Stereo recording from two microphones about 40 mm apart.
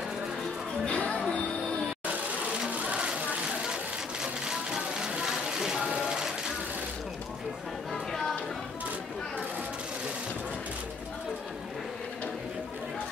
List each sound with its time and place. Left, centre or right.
0.8 s music: left
2.7 s a sound: right
3.6 s music: centre
5.9 s vehicle: centre
7.9 s music: centre